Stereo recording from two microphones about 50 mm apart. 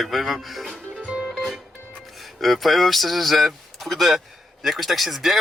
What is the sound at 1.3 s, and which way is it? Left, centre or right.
Music, centre.